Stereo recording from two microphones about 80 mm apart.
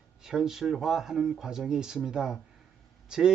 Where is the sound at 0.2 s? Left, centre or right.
Centre.